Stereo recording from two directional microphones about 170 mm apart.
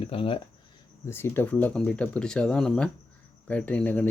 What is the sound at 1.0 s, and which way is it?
Speech, 15° left (ahead or behind).